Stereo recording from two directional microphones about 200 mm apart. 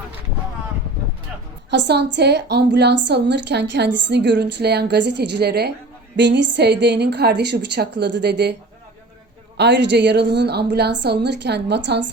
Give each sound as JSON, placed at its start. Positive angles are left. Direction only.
{"t": 1.7, "sound": "a woman's voice", "side_deg": -60}
{"t": 9.6, "sound": "a woman's voice", "side_deg": -60}